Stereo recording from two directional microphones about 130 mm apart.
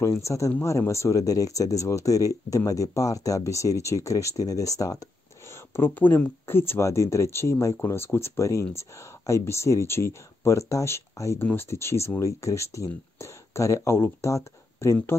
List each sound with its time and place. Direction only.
0.0 s speech: 20° left (ahead or behind)
5.8 s speech: 15° left (ahead or behind)